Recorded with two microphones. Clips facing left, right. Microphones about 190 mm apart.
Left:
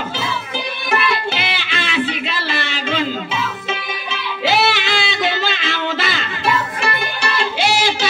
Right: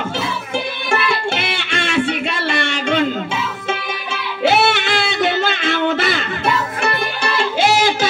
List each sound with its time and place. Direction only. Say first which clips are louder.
1.3 s music: right 2 dB; 55° right (ahead or behind)
4.5 s music: right 2 dB; 55° right (ahead or behind)
7.6 s a sound: right 3 dB; 50° right (ahead or behind)